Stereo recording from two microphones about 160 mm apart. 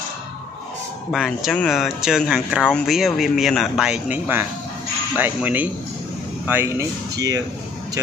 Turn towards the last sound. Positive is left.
turn(degrees=-20)  # may be behind; listen again after turning